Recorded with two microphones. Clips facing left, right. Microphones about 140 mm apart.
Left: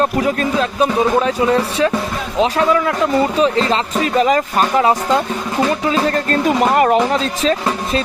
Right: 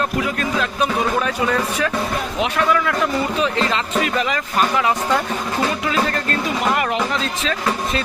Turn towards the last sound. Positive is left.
turn(degrees=35)  # may be behind; listen again after turning